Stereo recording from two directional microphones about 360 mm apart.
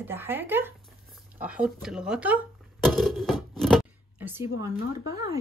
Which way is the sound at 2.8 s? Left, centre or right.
Centre.